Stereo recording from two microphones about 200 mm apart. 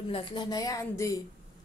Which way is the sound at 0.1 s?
25° left (ahead or behind).